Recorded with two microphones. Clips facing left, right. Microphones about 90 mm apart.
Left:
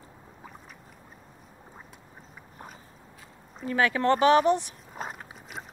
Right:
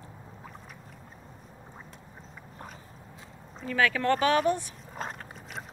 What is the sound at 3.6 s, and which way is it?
Speech, 25° left (ahead or behind).